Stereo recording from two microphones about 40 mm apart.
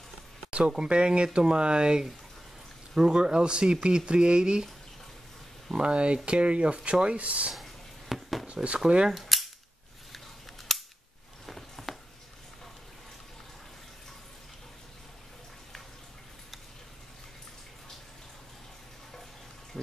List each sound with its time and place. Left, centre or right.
0.7 s speech: right
5.7 s speech: right
7.5 s a sound: centre
8.6 s speech: right
9.1 s cap gun: centre
10.7 s cap gun: centre
11.4 s a sound: centre